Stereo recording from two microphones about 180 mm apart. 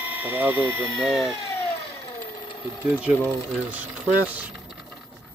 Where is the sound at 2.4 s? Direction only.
25° left (ahead or behind).